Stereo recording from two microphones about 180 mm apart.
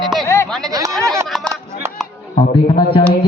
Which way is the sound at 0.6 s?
20° right (ahead or behind).